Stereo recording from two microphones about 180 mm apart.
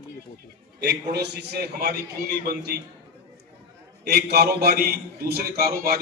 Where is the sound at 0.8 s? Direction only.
65° right (ahead or behind).